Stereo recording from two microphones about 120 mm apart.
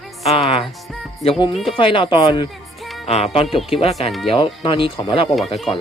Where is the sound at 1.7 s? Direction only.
45° left (ahead or behind).